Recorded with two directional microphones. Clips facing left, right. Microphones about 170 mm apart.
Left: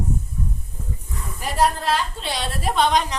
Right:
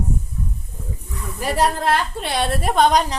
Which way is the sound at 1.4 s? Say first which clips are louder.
Right 1 dB; 65° right (ahead or behind).